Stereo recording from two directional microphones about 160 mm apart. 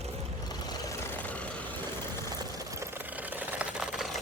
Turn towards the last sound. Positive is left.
turn(degrees=-5)  # may be behind; listen again after turning